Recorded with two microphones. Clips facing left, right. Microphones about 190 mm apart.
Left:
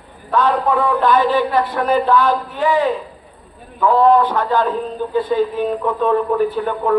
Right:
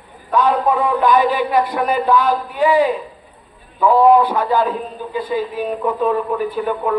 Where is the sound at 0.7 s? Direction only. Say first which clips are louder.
Even; 15° right (ahead or behind).